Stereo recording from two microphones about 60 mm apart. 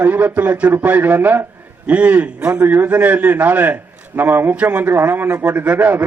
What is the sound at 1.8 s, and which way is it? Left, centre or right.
Speech, right.